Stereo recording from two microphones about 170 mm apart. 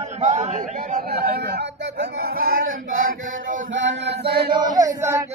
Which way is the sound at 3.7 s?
90° right.